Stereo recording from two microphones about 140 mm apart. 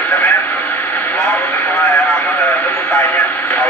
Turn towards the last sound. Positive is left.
turn(degrees=15)  # may be behind; listen again after turning